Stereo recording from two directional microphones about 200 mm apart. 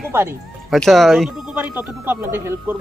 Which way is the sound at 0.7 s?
Centre (ahead or behind).